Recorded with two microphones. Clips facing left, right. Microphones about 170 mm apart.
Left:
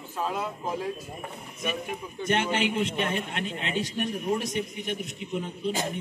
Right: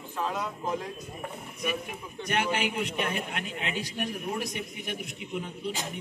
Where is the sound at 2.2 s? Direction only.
25° left (ahead or behind).